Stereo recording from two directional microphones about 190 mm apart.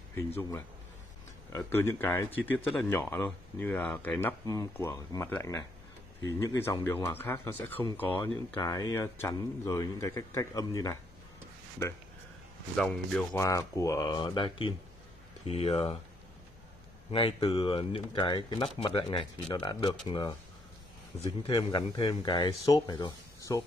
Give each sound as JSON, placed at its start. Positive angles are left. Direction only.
{"t": 1.5, "sound": "speech", "side_deg": 10}
{"t": 12.7, "sound": "speech", "side_deg": 5}
{"t": 13.3, "sound": "speech", "side_deg": 15}
{"t": 17.1, "sound": "speech", "side_deg": 30}